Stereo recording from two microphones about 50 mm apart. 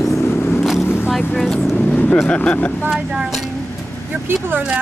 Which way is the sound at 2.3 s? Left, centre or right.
Left.